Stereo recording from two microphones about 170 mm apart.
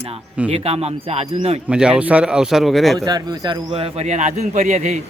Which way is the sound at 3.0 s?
25° right (ahead or behind).